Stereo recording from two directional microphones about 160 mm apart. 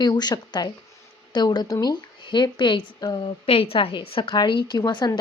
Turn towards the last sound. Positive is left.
turn(degrees=25)  # may be behind; listen again after turning